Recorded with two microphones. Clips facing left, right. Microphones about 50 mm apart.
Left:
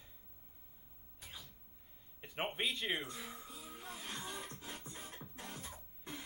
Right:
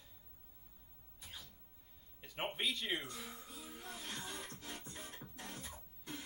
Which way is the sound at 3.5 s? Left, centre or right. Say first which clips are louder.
Left 1 dB; centre.